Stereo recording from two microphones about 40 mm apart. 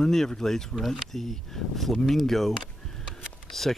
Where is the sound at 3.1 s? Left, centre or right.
Centre.